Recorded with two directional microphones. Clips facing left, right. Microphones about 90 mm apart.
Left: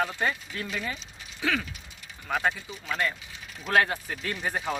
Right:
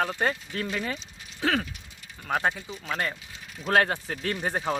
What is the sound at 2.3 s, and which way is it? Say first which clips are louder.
Speech: right 1 dB; 30° right (ahead or behind).